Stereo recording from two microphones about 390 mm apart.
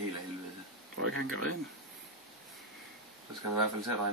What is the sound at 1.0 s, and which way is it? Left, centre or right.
Speech, right.